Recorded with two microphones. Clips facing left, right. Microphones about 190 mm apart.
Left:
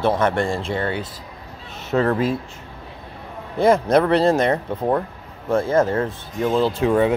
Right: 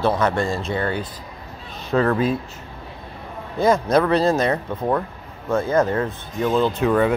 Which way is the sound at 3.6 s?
30° left (ahead or behind).